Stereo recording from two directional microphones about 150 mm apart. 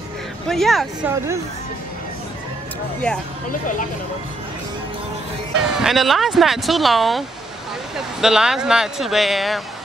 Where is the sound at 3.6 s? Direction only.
60° left (ahead or behind).